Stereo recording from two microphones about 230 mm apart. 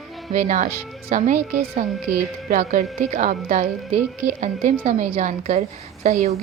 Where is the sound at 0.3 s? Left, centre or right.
Right.